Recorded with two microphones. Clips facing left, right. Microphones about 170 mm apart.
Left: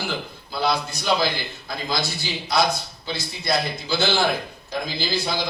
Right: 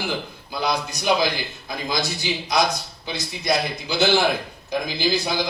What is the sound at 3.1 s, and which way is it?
A man's voice, 15° right (ahead or behind).